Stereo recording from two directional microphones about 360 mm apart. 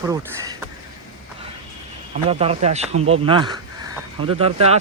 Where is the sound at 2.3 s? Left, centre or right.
Centre.